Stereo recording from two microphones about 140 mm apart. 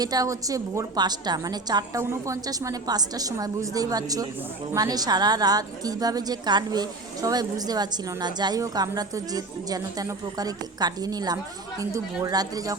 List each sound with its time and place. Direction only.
0.0 s speech: 25° right (ahead or behind)